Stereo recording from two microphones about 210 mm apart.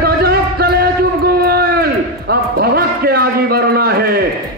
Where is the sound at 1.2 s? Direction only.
45° right (ahead or behind).